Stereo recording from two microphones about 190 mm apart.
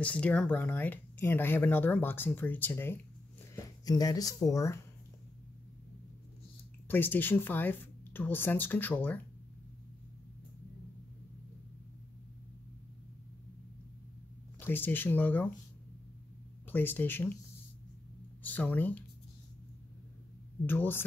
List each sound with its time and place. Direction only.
0.0 s speech: 5° left (ahead or behind)
6.9 s speech: 10° left (ahead or behind)
14.6 s speech: 10° left (ahead or behind)
16.7 s speech: 10° left (ahead or behind)
18.4 s speech: 10° left (ahead or behind)
20.6 s speech: 10° left (ahead or behind)